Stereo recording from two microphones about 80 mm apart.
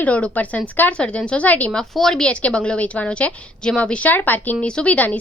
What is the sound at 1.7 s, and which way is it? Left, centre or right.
A woman's voice, centre.